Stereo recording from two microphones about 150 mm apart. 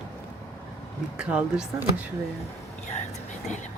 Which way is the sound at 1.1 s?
5° right (ahead or behind).